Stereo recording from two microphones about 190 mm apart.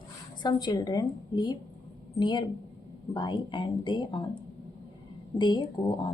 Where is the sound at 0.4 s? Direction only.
20° left (ahead or behind).